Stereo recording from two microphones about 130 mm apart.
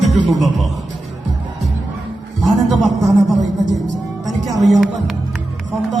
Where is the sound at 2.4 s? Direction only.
Centre (ahead or behind).